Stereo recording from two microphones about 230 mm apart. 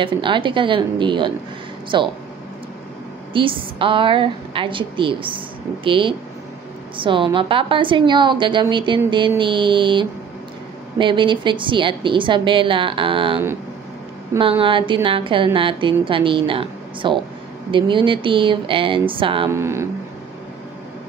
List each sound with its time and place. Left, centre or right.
0.0 s a woman's voice: right
3.3 s a woman's voice: right
14.6 s a woman's voice: right
19.5 s speech: centre